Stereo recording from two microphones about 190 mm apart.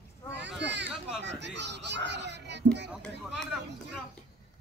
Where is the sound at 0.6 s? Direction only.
65° right (ahead or behind).